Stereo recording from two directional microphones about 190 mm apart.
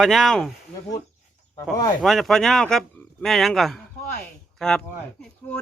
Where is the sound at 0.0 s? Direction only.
Centre (ahead or behind).